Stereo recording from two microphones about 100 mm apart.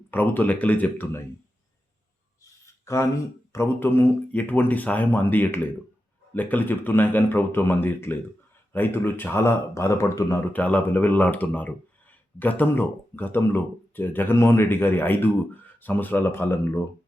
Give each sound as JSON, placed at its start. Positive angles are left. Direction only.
{"t": 0.1, "sound": "speech", "side_deg": 20}
{"t": 2.4, "sound": "a sound", "side_deg": 30}
{"t": 3.5, "sound": "speech", "side_deg": 25}
{"t": 10.5, "sound": "speech", "side_deg": 15}